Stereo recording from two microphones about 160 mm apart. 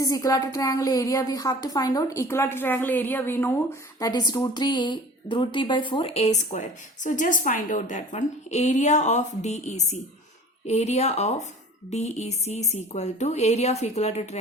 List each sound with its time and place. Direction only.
0.0 s a woman's voice: 20° left (ahead or behind)
4.0 s a woman's voice: 25° left (ahead or behind); by 14.3 s 40° left (ahead or behind)